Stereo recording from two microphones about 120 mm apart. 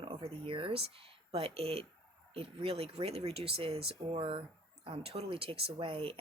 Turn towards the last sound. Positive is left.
turn(degrees=-50)  # may be behind; listen again after turning